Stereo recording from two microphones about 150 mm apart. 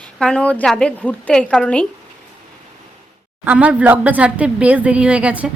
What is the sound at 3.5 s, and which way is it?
Speech, 10° right (ahead or behind).